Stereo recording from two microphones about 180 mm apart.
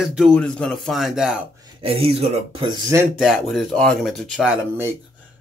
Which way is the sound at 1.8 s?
30° right (ahead or behind).